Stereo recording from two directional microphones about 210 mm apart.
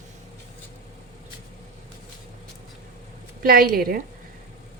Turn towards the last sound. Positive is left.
turn(degrees=-45)  # may be behind; listen again after turning